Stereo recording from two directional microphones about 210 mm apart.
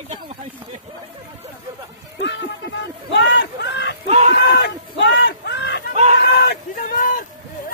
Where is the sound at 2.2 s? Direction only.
55° left (ahead or behind).